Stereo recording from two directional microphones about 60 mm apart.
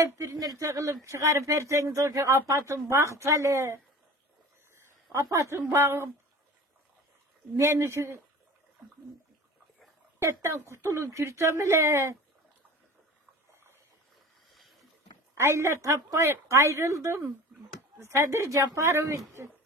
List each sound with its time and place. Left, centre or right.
0.0 s speech: right
5.1 s speech: right
5.4 s a woman's voice: right
7.5 s speech: right
10.2 s a woman's voice: right
14.5 s boat: centre
15.3 s a woman's voice: right